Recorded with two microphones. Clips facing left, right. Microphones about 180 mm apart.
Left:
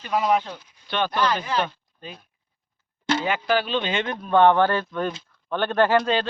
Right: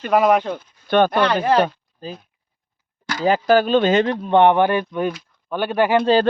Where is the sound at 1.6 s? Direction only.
35° right (ahead or behind).